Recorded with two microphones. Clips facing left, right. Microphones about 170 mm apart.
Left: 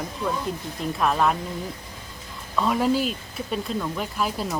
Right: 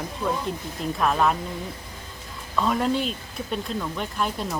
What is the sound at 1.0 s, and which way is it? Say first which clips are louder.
Speech: even; centre (ahead or behind).